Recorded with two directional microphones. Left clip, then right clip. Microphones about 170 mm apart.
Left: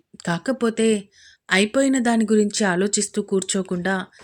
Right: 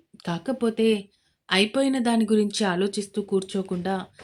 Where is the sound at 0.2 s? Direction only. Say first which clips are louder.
Left 4 dB; 30° left (ahead or behind).